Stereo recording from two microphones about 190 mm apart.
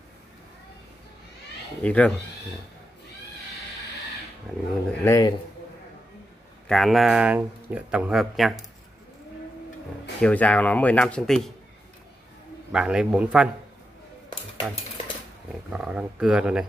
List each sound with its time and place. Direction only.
1.8 s speech: 5° left (ahead or behind)
4.5 s speech: centre (ahead or behind)
5.0 s speech: 15° left (ahead or behind)
6.7 s speech: centre (ahead or behind)
10.2 s speech: 5° left (ahead or behind)
12.7 s speech: 5° right (ahead or behind)
15.7 s speech: 5° right (ahead or behind)